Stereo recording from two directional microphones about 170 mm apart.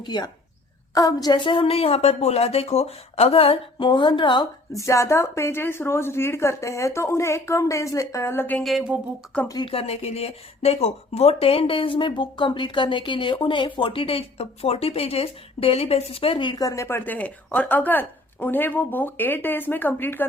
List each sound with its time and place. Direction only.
0.0 s a woman's voice: 25° left (ahead or behind); by 9.0 s 5° right (ahead or behind)
9.5 s speech: 30° left (ahead or behind); by 20.2 s 10° left (ahead or behind)